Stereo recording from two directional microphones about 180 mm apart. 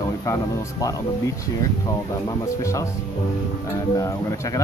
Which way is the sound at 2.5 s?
15° left (ahead or behind).